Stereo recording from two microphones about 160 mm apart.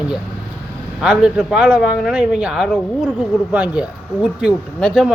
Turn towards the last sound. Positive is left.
turn(degrees=0)  # may be behind; listen again after turning